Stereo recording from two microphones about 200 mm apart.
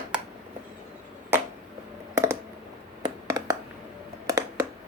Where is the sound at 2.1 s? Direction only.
15° right (ahead or behind).